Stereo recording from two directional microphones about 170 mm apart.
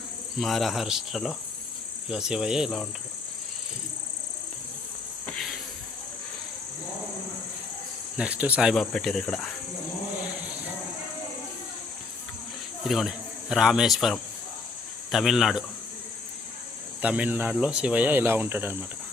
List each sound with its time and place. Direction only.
0.3 s cricket: centre (ahead or behind)
5.2 s a sound: 5° left (ahead or behind)
8.1 s speech: 10° right (ahead or behind)
8.7 s cricket: 5° left (ahead or behind)
12.9 s speech: centre (ahead or behind)
15.1 s cricket: centre (ahead or behind)
17.0 s speech: 10° right (ahead or behind)